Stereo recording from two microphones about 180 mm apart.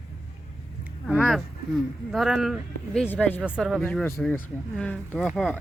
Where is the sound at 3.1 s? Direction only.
10° left (ahead or behind).